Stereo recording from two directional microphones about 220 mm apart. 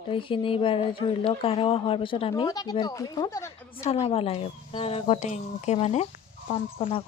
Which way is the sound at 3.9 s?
25° left (ahead or behind).